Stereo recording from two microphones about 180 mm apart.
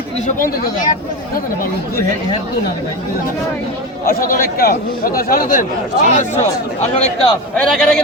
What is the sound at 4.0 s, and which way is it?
A man's voice, 55° left (ahead or behind).